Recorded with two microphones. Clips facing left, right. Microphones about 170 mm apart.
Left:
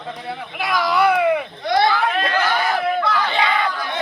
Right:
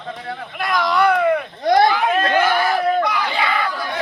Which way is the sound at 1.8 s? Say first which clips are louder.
Right 1 dB; 15° right (ahead or behind).